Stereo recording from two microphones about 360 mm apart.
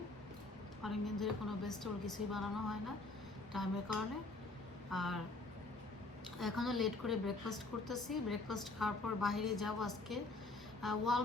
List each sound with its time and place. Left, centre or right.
0.8 s a woman's voice: centre
6.4 s a woman's voice: centre